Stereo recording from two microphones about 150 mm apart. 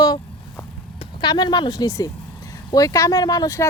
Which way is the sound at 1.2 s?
25° left (ahead or behind).